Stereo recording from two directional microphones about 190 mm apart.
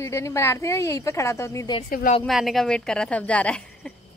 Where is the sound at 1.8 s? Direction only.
45° left (ahead or behind).